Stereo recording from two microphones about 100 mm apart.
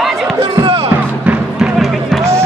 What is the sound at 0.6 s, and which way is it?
Music, 70° right (ahead or behind).